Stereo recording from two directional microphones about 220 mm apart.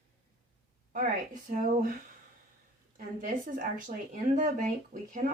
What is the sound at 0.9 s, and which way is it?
Speech, 40° right (ahead or behind).